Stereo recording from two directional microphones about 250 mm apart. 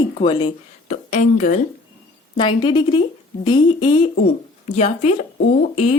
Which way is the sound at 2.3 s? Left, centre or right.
Centre.